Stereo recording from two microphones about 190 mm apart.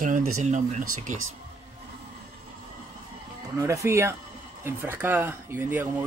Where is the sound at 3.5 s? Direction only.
15° right (ahead or behind).